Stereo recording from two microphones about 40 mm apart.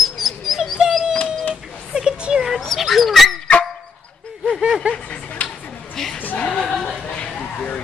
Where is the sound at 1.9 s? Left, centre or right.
Right.